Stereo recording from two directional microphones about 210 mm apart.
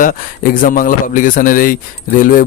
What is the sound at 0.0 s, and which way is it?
A man's voice, 40° left (ahead or behind).